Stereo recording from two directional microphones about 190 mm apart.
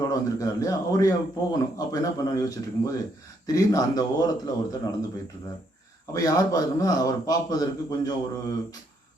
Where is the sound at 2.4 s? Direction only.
20° left (ahead or behind).